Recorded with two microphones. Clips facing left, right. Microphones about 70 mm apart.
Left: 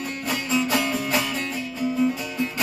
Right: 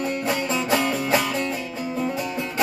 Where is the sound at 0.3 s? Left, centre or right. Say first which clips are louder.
Left 3 dB; right.